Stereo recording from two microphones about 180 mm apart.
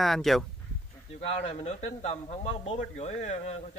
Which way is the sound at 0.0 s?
Centre (ahead or behind).